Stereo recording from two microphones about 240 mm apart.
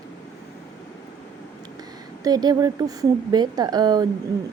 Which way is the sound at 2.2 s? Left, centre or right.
Centre.